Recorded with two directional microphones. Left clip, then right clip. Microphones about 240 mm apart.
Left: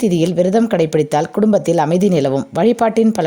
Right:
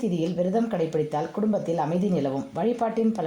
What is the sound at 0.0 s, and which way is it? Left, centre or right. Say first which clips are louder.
A woman's voice: left 11 dB; left.